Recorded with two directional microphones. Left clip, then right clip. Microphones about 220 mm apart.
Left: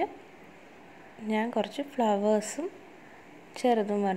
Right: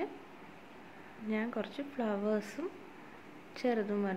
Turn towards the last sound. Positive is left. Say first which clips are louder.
# left 7 dB
turn(degrees=20)  # may be behind; listen again after turning